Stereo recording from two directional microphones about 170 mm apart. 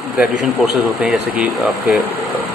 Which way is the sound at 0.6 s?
5° right (ahead or behind).